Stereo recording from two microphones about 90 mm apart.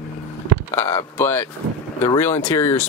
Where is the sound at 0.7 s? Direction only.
30° left (ahead or behind).